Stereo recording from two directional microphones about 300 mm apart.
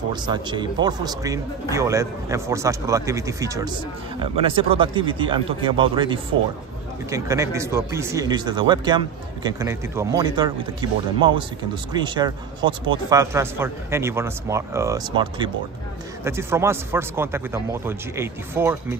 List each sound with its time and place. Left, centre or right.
0.1 s speech: centre